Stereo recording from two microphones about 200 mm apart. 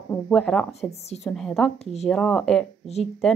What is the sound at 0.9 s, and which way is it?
Speech, 30° left (ahead or behind).